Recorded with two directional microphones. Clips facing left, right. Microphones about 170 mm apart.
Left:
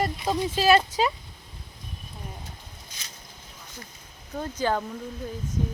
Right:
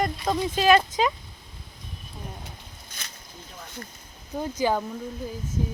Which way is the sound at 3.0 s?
55° right (ahead or behind).